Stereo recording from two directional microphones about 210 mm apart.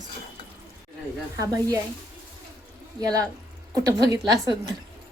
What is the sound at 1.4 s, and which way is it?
Speech, 15° right (ahead or behind).